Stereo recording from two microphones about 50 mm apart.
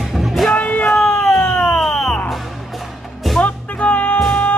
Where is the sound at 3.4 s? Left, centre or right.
Left.